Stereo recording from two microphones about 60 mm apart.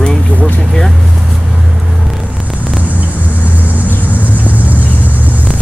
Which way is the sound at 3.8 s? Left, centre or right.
Left.